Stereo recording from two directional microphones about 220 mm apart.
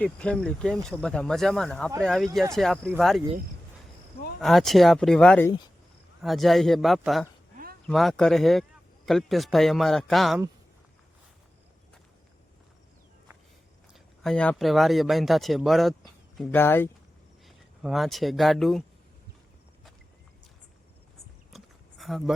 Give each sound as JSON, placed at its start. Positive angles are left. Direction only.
{"t": 0.0, "sound": "speech", "side_deg": 5}
{"t": 4.4, "sound": "speech", "side_deg": 0}
{"t": 7.5, "sound": "a sound", "side_deg": -40}
{"t": 7.9, "sound": "speech", "side_deg": 0}
{"t": 13.9, "sound": "speech", "side_deg": 0}
{"t": 17.4, "sound": "speech", "side_deg": 0}
{"t": 21.5, "sound": "a sound", "side_deg": 0}